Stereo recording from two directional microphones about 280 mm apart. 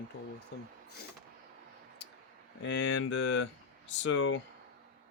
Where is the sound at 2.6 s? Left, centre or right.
Left.